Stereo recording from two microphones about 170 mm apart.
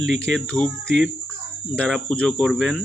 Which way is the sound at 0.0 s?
90° right.